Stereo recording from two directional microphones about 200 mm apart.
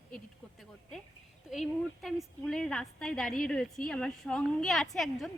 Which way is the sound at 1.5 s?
Centre (ahead or behind).